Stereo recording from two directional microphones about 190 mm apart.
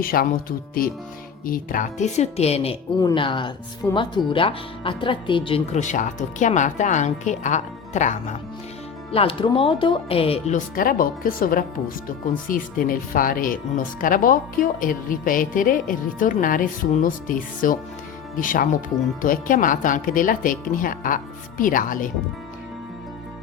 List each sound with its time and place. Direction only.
0.0 s speech: 50° left (ahead or behind)
1.5 s speech: 45° left (ahead or behind)
3.0 s a woman's voice: 25° left (ahead or behind); by 22.1 s 45° left (ahead or behind)